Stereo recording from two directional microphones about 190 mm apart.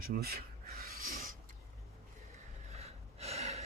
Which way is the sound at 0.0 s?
50° right (ahead or behind).